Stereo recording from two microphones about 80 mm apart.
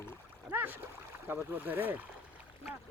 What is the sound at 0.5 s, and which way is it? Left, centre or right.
Rowboat, right.